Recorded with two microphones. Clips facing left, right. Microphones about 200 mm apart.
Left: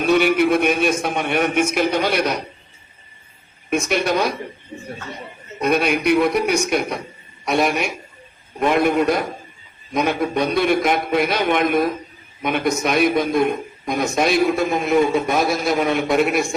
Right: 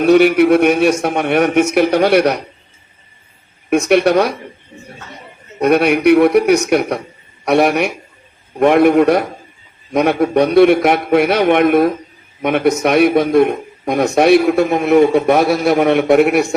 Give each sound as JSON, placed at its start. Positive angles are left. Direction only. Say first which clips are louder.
{"t": 0.0, "sound": "a man's voice", "louder": "right 7 dB", "side_deg": -60}
{"t": 3.7, "sound": "a man's voice", "louder": "right 8 dB", "side_deg": -65}
{"t": 5.5, "sound": "a man's voice", "louder": "right 6 dB", "side_deg": -65}